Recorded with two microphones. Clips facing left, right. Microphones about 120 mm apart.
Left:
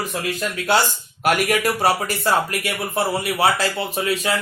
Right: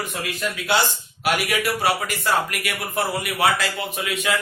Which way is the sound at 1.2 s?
45° left (ahead or behind).